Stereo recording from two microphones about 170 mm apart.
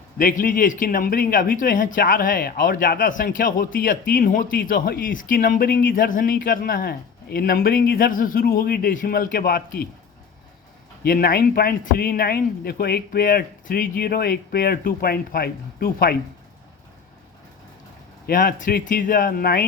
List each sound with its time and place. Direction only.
0.2 s speech: 55° left (ahead or behind)
11.0 s speech: 65° left (ahead or behind)
18.3 s speech: 55° left (ahead or behind)